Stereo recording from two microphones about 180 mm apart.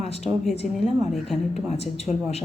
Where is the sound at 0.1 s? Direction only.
35° left (ahead or behind).